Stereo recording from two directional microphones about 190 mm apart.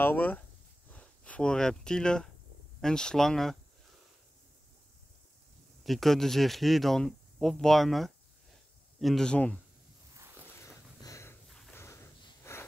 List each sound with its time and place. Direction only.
0.0 s speech: 10° left (ahead or behind)
5.9 s speech: centre (ahead or behind)
11.0 s snort: 15° left (ahead or behind)
11.4 s snort: centre (ahead or behind)
11.7 s a sound: 15° left (ahead or behind)
12.5 s wheeze: 15° left (ahead or behind)